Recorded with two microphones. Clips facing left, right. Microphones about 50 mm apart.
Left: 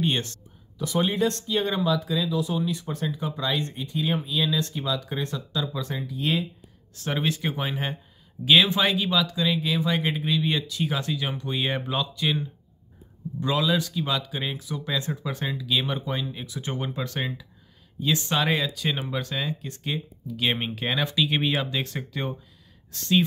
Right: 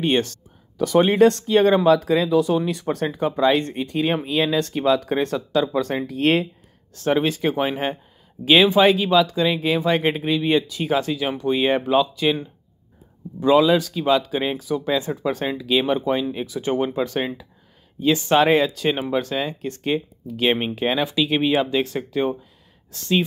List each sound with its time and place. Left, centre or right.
0.7 s speech: right
1.2 s speech: right
2.5 s speech: right
3.8 s speech: right
7.1 s speech: right
20.5 s speech: centre